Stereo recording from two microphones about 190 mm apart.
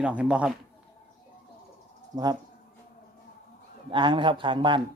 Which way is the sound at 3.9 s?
25° right (ahead or behind).